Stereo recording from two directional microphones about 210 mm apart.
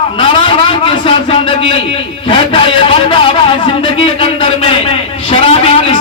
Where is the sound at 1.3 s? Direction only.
25° left (ahead or behind).